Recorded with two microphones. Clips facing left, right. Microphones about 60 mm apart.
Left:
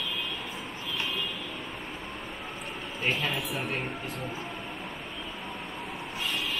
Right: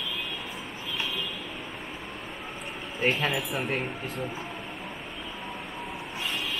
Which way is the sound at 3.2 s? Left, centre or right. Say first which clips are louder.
Right 3 dB; centre.